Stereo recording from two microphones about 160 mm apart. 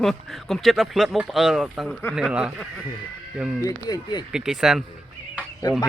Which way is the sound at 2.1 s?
5° right (ahead or behind).